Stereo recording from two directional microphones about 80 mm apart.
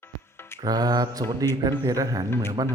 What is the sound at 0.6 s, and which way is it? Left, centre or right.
Mantra, right.